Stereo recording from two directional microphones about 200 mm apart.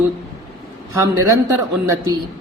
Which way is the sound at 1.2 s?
15° right (ahead or behind).